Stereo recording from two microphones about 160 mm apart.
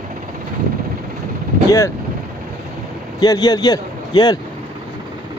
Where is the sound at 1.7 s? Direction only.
20° left (ahead or behind).